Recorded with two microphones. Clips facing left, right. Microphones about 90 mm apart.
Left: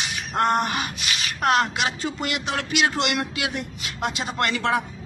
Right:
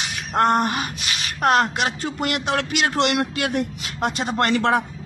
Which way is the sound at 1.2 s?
40° right (ahead or behind).